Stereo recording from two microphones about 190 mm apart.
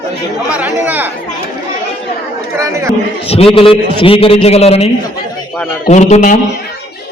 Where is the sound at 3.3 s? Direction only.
30° left (ahead or behind).